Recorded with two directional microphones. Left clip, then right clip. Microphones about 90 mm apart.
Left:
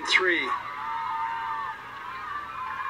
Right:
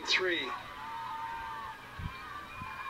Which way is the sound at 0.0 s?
15° left (ahead or behind).